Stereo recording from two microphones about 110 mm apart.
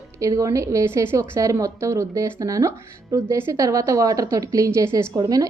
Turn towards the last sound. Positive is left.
turn(degrees=-35)  # may be behind; listen again after turning